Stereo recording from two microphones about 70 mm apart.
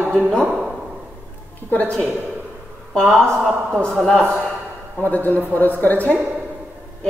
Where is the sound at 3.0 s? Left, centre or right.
Centre.